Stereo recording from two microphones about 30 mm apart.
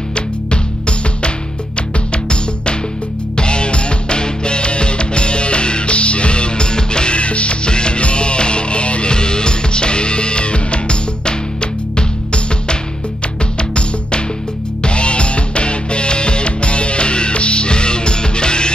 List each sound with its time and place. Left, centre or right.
0.1 s music: left
7.2 s music: left
9.1 s music: left